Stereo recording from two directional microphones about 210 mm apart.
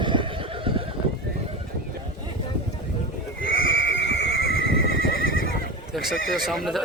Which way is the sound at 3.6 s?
65° left (ahead or behind).